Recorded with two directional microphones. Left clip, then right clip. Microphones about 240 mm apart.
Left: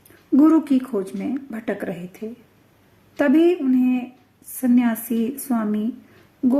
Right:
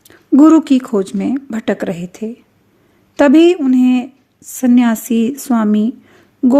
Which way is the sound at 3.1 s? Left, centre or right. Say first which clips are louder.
Right 8 dB; right.